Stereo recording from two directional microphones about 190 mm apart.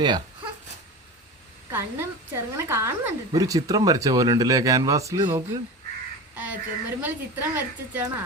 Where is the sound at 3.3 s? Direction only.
20° right (ahead or behind).